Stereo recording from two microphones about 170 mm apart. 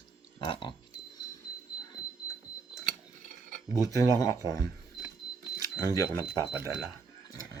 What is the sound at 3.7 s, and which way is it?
Speech, 20° left (ahead or behind).